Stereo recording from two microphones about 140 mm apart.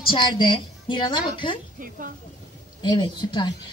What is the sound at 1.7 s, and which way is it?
Speech, 75° right (ahead or behind).